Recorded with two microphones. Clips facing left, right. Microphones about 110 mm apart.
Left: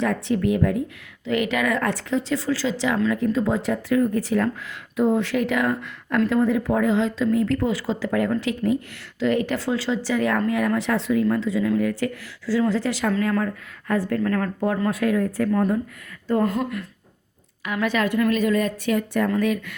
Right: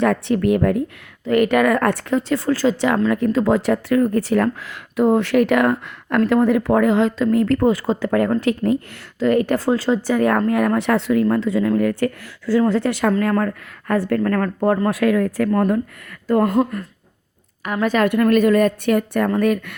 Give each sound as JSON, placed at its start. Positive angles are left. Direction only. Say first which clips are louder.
{"t": 0.0, "sound": "speech", "louder": "right 5 dB", "side_deg": -60}
{"t": 3.1, "sound": "speech", "louder": "right 5 dB", "side_deg": -70}
{"t": 14.8, "sound": "speech", "louder": "right 4 dB", "side_deg": -90}
{"t": 16.5, "sound": "speech", "louder": "right 7 dB", "side_deg": -45}
{"t": 18.1, "sound": "speech", "louder": "right 7 dB", "side_deg": -60}